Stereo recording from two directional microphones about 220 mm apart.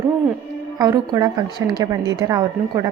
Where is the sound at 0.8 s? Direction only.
15° right (ahead or behind).